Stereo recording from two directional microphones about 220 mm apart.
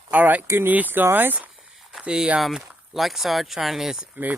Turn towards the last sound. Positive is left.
turn(degrees=-5)  # may be behind; listen again after turning